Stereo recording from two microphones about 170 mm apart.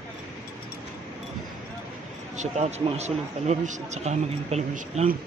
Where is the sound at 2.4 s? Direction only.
40° right (ahead or behind).